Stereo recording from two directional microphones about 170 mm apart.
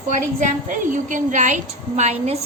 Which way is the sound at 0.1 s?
45° right (ahead or behind).